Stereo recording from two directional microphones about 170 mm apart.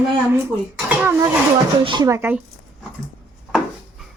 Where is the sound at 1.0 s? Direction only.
15° right (ahead or behind).